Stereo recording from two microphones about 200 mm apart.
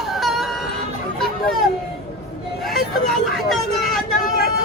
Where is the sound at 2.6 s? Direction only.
Centre (ahead or behind).